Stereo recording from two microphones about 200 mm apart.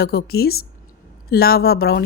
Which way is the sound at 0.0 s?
50° left (ahead or behind).